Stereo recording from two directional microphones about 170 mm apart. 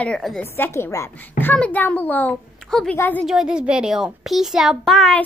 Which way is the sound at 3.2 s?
5° right (ahead or behind).